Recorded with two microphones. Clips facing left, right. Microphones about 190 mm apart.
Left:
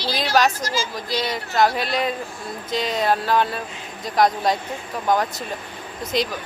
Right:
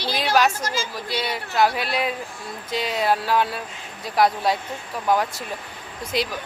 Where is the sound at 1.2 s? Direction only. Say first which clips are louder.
Left 1 dB; 10° right (ahead or behind).